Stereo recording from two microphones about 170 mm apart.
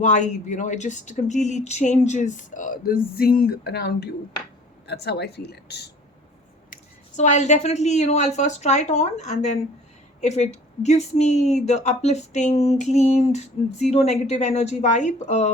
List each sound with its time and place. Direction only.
0.0 s speech: 45° left (ahead or behind); by 5.9 s 75° left (ahead or behind)
7.2 s speech: 45° left (ahead or behind)